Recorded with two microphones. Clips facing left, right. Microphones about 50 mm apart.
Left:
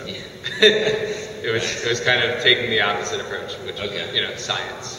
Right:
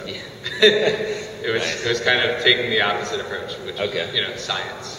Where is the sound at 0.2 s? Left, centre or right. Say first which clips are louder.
Even; centre.